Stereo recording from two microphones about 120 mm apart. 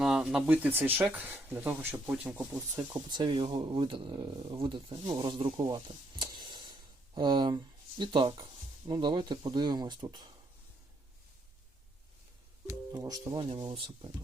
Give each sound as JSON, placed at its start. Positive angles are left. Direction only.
{"t": 0.0, "sound": "speech", "side_deg": -5}
{"t": 2.7, "sound": "speech", "side_deg": -35}
{"t": 5.5, "sound": "a sound", "side_deg": -35}
{"t": 8.9, "sound": "speech", "side_deg": -40}
{"t": 12.6, "sound": "speech", "side_deg": -30}
{"t": 13.7, "sound": "speech", "side_deg": -50}